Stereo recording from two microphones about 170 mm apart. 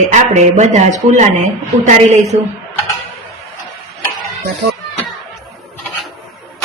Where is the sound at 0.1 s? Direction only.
45° right (ahead or behind).